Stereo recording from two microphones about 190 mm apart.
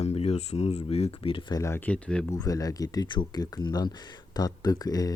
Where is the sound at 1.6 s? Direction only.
10° left (ahead or behind).